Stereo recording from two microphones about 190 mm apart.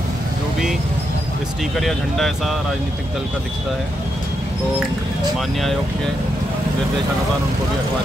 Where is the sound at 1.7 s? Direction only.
Centre (ahead or behind).